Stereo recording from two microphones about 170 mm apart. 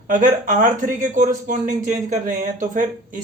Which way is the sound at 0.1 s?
50° right (ahead or behind).